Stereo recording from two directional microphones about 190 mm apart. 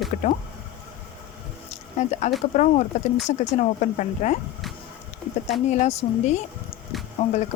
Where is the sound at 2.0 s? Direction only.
40° left (ahead or behind).